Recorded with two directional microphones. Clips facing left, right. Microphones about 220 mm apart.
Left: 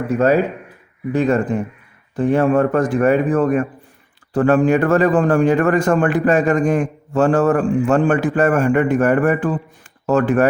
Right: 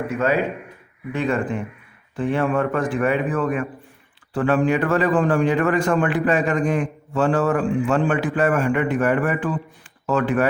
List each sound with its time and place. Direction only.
0.1 s a man's voice: 40° left (ahead or behind)